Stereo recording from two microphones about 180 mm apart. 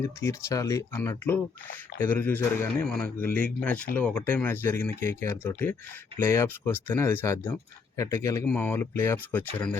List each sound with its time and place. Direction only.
0.0 s speech: 15° left (ahead or behind)